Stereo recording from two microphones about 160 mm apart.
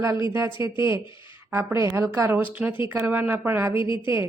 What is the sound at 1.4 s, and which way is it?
Speech, 15° right (ahead or behind).